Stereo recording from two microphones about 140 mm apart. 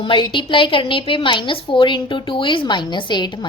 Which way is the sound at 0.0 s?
35° left (ahead or behind).